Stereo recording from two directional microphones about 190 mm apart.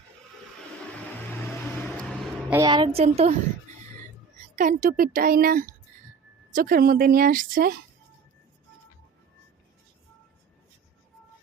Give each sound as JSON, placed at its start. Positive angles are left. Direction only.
{"t": 2.5, "sound": "a woman's voice", "side_deg": -20}
{"t": 4.5, "sound": "speech", "side_deg": -45}